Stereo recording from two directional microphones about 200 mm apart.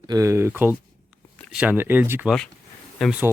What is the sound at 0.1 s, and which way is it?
Speech, 15° right (ahead or behind).